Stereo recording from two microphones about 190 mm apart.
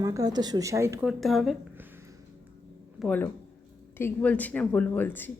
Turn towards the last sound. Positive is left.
turn(degrees=10)  # may be behind; listen again after turning